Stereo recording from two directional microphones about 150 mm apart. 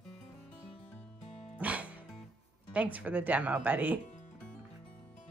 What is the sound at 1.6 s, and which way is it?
Music, 10° right (ahead or behind).